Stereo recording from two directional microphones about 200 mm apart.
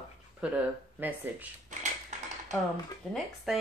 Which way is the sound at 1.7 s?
35° right (ahead or behind).